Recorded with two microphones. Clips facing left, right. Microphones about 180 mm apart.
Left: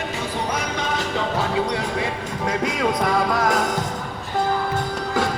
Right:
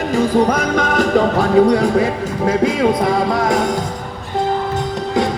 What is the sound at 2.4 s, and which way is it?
Music, 25° right (ahead or behind).